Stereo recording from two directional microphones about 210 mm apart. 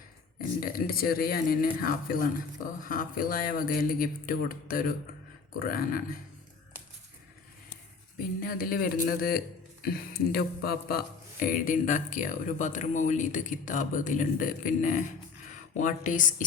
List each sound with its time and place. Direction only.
0.6 s speech: 45° left (ahead or behind)
8.4 s a man's voice: 45° left (ahead or behind)